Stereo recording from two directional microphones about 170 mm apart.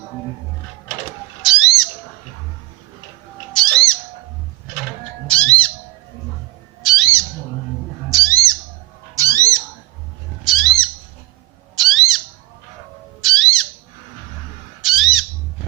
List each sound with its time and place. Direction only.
1.4 s a sound: centre (ahead or behind)
3.5 s bird: 5° left (ahead or behind)
5.3 s squawk: 5° left (ahead or behind)
6.8 s bird: centre (ahead or behind)
8.1 s bird: 20° right (ahead or behind)
9.1 s a sound: 20° right (ahead or behind)
10.4 s a sound: centre (ahead or behind)
11.8 s bird: centre (ahead or behind)
13.2 s bird: centre (ahead or behind)
14.8 s squawk: centre (ahead or behind)